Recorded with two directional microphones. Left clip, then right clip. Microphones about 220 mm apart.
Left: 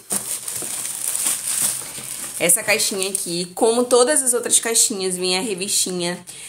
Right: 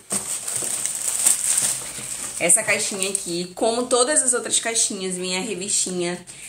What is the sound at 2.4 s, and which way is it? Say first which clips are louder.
A woman's voice: left 2 dB; 45° left (ahead or behind).